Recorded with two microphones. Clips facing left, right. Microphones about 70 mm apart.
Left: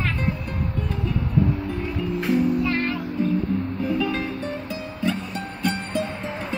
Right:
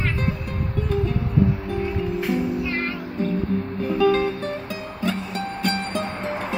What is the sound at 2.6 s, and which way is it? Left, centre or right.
Music, centre.